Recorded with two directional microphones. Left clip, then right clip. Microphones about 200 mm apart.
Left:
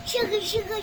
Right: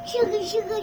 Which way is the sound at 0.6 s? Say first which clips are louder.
Right 3 dB; 45° left (ahead or behind).